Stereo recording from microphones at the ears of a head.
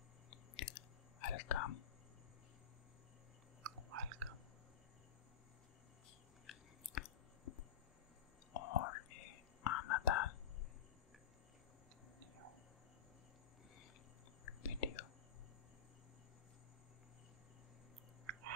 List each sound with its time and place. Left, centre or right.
0.3 s chewing: left
3.6 s chewing: right
6.4 s chewing: left
8.5 s whispering: left
14.4 s whispering: left